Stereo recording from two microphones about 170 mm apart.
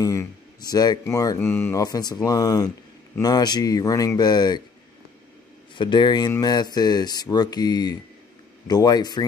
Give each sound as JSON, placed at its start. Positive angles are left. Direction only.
{"t": 0.0, "sound": "speech", "side_deg": 20}
{"t": 5.8, "sound": "speech", "side_deg": 25}